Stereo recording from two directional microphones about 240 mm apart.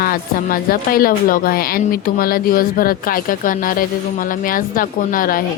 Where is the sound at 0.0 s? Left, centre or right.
Left.